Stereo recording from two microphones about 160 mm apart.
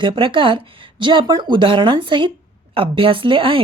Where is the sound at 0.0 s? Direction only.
30° right (ahead or behind).